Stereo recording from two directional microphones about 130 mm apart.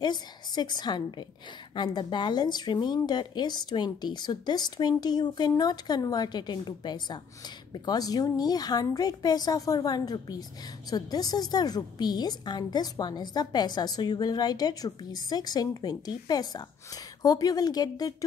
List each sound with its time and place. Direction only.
0.0 s a woman's voice: 35° left (ahead or behind)